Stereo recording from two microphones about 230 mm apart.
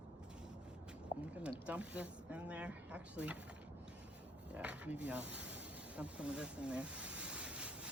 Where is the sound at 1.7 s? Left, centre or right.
Centre.